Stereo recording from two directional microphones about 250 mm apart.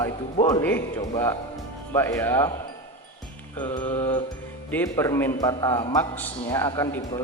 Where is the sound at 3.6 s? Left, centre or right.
Centre.